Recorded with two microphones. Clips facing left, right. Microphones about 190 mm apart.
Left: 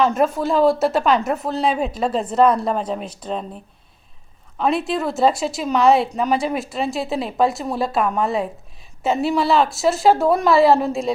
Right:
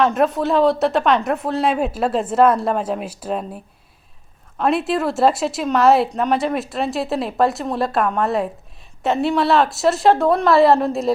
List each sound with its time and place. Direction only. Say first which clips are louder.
0.0 s a woman's voice: right 1 dB; centre (ahead or behind)